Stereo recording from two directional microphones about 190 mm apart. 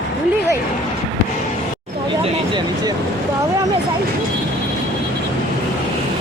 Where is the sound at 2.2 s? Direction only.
25° right (ahead or behind).